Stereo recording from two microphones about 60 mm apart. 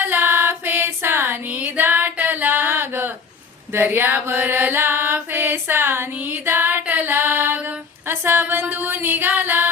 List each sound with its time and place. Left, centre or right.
0.0 s female singing: right
1.5 s music: right
8.0 s a sound: right
8.7 s music: right